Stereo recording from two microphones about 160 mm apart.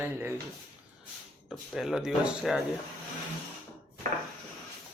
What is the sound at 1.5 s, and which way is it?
Speech, centre (ahead or behind).